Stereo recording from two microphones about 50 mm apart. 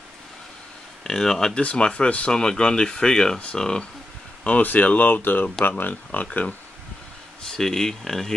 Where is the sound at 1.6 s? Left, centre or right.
Left.